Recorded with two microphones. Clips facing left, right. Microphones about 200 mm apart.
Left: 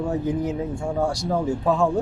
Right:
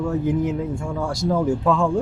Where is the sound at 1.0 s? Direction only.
70° right (ahead or behind); by 1.9 s 90° right.